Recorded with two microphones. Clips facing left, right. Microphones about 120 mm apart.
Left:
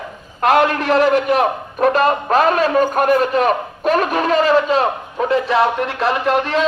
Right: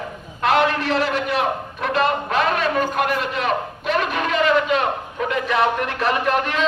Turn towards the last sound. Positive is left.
turn(degrees=30)  # may be behind; listen again after turning